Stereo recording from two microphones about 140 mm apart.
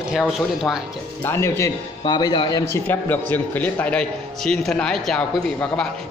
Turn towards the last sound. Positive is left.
turn(degrees=5)  # may be behind; listen again after turning